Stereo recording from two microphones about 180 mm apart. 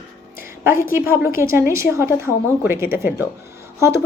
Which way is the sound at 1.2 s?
15° right (ahead or behind).